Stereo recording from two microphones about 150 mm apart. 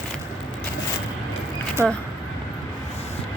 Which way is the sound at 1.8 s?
20° right (ahead or behind).